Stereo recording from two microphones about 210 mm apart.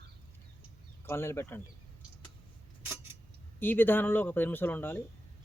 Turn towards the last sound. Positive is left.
turn(degrees=10)  # may be behind; listen again after turning